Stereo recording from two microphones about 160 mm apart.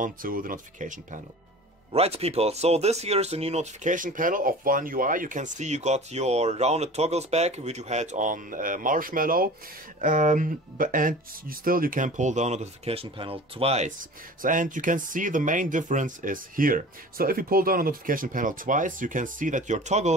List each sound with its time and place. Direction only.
0.0 s speech: 60° right (ahead or behind)
1.9 s speech: 40° right (ahead or behind); by 9.5 s 60° right (ahead or behind)
9.9 s speech: 50° right (ahead or behind)
14.4 s speech: 55° right (ahead or behind)